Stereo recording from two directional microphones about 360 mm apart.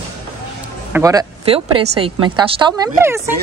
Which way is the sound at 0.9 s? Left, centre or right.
Centre.